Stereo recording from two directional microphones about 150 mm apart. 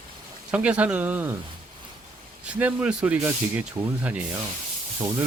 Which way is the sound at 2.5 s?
10° right (ahead or behind).